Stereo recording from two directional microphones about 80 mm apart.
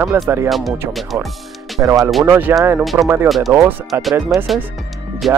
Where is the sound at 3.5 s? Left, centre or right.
Right.